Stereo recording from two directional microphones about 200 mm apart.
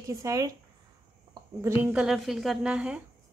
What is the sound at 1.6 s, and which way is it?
A woman's voice, 5° right (ahead or behind).